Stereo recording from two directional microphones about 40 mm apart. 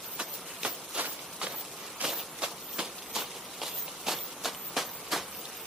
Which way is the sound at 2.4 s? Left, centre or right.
Centre.